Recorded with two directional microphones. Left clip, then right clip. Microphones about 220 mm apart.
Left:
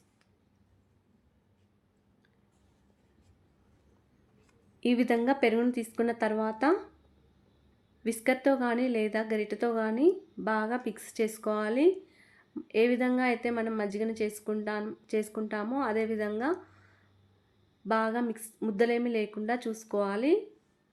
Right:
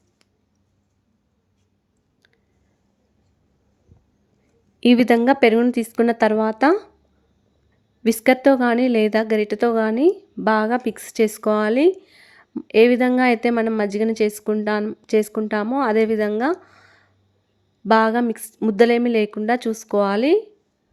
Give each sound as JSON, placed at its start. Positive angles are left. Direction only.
{"t": 4.8, "sound": "a woman's voice", "side_deg": -45}
{"t": 8.0, "sound": "a woman's voice", "side_deg": -45}